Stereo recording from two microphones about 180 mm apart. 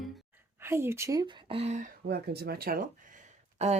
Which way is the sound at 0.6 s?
15° right (ahead or behind).